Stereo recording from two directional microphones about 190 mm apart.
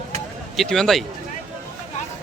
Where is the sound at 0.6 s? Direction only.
Centre (ahead or behind).